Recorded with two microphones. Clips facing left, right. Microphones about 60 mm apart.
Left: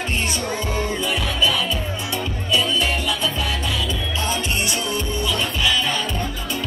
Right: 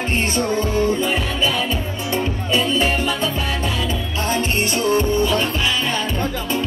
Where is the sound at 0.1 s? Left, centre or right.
Right.